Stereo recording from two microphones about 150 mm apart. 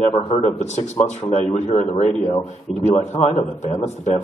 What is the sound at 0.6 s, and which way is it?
A man's voice, 50° left (ahead or behind).